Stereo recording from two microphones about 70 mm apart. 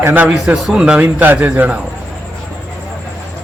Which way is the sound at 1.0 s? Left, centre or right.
Right.